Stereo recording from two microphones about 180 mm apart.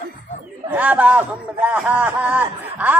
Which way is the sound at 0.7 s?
5° right (ahead or behind).